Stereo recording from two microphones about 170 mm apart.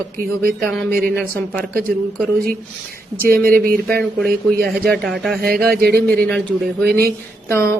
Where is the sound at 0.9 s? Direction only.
60° right (ahead or behind).